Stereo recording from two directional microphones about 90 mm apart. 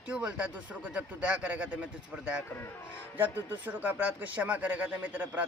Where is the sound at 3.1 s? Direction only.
20° right (ahead or behind).